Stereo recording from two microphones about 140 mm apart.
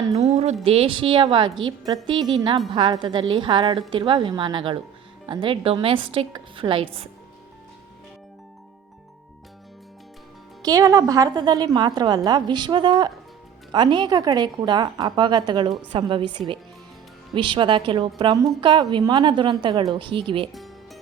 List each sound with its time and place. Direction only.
0.2 s a sound: 50° right (ahead or behind)
0.6 s a woman's voice: 45° right (ahead or behind)
10.6 s a woman's voice: 25° right (ahead or behind)
20.5 s music: centre (ahead or behind)